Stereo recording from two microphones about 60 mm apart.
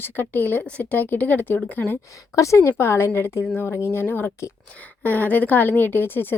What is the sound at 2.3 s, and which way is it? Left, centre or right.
A woman's voice, left.